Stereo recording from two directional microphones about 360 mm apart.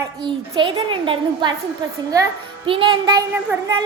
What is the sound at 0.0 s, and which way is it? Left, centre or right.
A woman's voice, centre.